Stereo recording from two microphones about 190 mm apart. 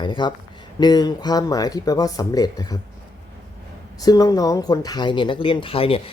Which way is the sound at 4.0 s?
20° left (ahead or behind).